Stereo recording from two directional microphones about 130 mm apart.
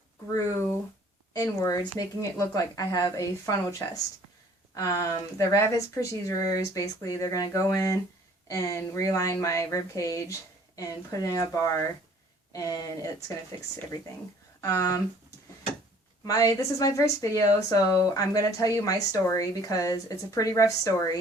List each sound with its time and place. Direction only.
1.3 s speech: 25° left (ahead or behind)
14.6 s speech: 25° left (ahead or behind)
16.2 s speech: 25° left (ahead or behind)